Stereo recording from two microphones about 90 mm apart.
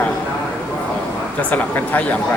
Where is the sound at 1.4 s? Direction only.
20° left (ahead or behind).